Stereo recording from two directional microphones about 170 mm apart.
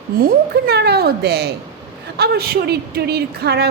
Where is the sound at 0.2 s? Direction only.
65° right (ahead or behind).